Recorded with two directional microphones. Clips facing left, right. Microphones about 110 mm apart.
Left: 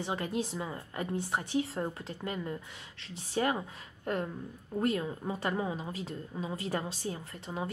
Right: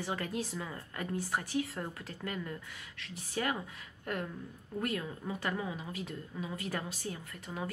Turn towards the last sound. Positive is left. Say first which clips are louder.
# left 3 dB
turn(degrees=25)  # may be behind; listen again after turning